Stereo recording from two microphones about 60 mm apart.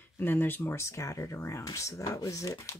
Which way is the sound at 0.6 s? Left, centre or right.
Left.